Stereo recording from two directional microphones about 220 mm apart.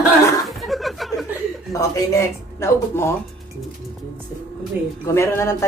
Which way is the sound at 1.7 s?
15° left (ahead or behind).